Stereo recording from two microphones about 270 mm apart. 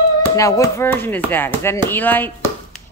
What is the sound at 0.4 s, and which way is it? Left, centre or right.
Speech, centre.